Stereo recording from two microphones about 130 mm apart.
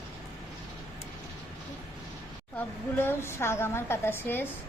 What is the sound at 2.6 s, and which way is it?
A woman's voice, 15° left (ahead or behind).